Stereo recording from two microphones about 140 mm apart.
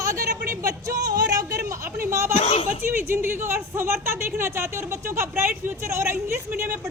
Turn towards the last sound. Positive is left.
turn(degrees=-15)  # may be behind; listen again after turning